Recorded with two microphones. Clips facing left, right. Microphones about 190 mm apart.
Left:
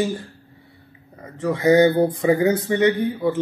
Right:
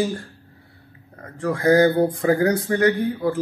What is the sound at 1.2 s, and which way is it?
Speech, 5° left (ahead or behind).